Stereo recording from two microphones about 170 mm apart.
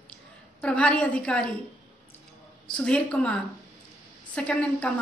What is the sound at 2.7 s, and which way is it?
A woman's voice, 5° left (ahead or behind).